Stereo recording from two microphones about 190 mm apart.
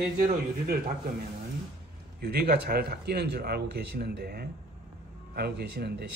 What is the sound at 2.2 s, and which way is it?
Speech, 55° right (ahead or behind).